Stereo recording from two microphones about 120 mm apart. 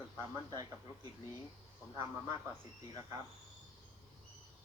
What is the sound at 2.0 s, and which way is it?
Speech, 30° right (ahead or behind).